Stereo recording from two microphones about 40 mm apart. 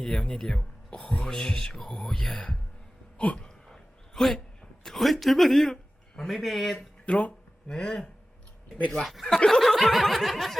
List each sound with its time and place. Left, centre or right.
0.0 s speech: centre
3.2 s speech: left
3.7 s a sound: centre
4.9 s speech: centre
7.0 s speech: left
7.7 s speech: centre
9.2 s speech: centre
9.6 s snicker: centre
10.2 s speech: centre